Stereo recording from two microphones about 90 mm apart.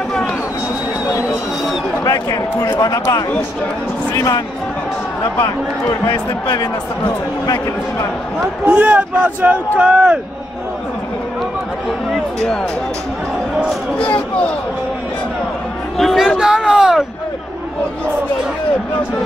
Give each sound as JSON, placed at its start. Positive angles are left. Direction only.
{"t": 2.0, "sound": "a man's voice", "side_deg": 45}
{"t": 5.4, "sound": "speech", "side_deg": 55}
{"t": 7.4, "sound": "speech", "side_deg": 45}
{"t": 8.6, "sound": "speech", "side_deg": -15}
{"t": 16.0, "sound": "a sound", "side_deg": 5}
{"t": 16.3, "sound": "speech", "side_deg": -5}